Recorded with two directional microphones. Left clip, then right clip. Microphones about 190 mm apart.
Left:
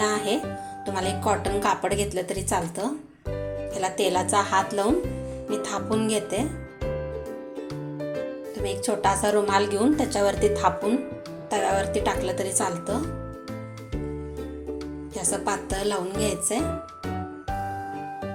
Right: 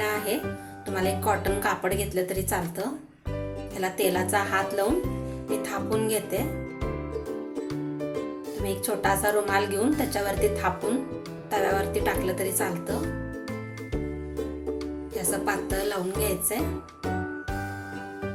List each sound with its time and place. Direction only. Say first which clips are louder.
0.0 s music: left 3 dB; 25° left (ahead or behind)
0.9 s a woman's voice: even; 20° left (ahead or behind)
8.6 s a woman's voice: left 3 dB; 20° left (ahead or behind)
15.1 s a woman's voice: left 1 dB; 20° left (ahead or behind)